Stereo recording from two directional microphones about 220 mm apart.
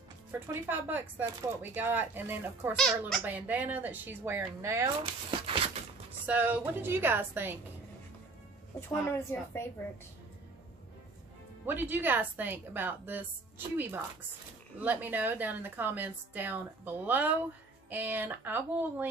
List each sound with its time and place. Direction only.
0.3 s a woman's voice: 10° right (ahead or behind)
2.7 s a woman's voice: centre (ahead or behind)
5.0 s speech: 25° right (ahead or behind)
6.2 s a woman's voice: 10° right (ahead or behind)
8.8 s speech: 10° left (ahead or behind)
11.6 s a woman's voice: 10° right (ahead or behind)